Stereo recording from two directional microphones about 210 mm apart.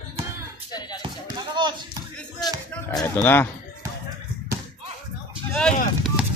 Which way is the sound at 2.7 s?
10° left (ahead or behind).